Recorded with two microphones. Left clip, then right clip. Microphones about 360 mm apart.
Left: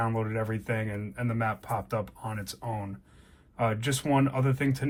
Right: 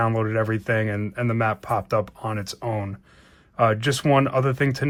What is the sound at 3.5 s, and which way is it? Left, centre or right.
Speech, centre.